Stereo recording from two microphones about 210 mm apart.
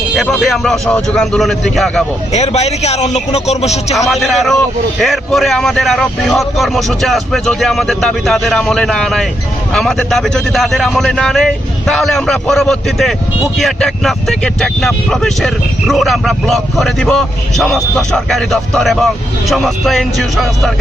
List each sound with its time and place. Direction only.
0.2 s speech: centre (ahead or behind)
2.3 s speech: 30° left (ahead or behind)
4.1 s speech: centre (ahead or behind)